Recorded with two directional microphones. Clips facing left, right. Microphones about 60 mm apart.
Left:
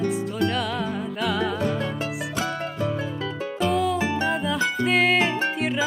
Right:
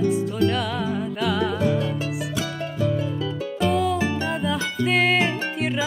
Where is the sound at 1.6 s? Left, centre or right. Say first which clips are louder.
Right 3 dB; left.